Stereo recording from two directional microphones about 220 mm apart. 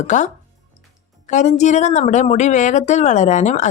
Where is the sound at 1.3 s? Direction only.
35° left (ahead or behind).